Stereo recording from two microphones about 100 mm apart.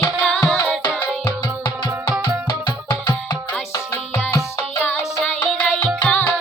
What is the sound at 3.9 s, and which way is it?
Music, 25° left (ahead or behind).